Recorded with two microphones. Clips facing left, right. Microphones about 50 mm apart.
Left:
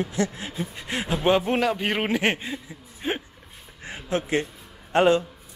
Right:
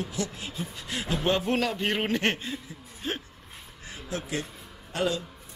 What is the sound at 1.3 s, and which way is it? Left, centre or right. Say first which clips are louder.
A man's voice: left 5 dB; centre.